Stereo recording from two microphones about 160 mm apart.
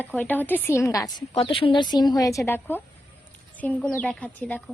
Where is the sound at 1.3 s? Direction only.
35° left (ahead or behind).